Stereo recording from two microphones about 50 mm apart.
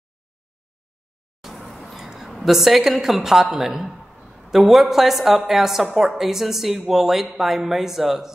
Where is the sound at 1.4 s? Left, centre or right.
Centre.